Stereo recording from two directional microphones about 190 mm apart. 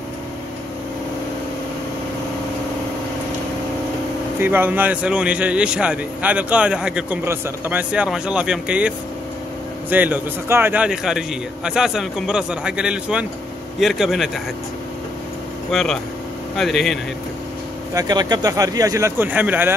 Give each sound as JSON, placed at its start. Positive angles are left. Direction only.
{"t": 4.4, "sound": "a man's voice", "side_deg": -10}
{"t": 15.7, "sound": "a man's voice", "side_deg": 0}
{"t": 17.9, "sound": "speech", "side_deg": -20}